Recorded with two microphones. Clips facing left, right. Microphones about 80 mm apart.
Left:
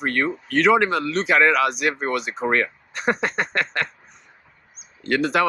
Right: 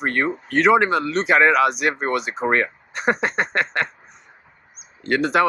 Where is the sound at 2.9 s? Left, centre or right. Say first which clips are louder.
Right 2 dB; centre.